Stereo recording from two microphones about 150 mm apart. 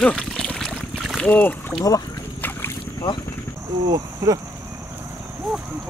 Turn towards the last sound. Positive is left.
turn(degrees=0)  # may be behind; listen again after turning